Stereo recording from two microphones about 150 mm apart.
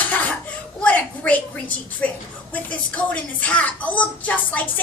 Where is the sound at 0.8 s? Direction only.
10° left (ahead or behind).